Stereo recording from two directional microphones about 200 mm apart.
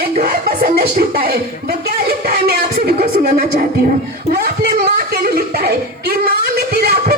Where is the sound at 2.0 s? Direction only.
50° right (ahead or behind).